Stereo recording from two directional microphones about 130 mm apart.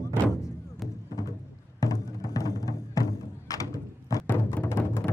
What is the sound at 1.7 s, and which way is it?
Music, 25° left (ahead or behind).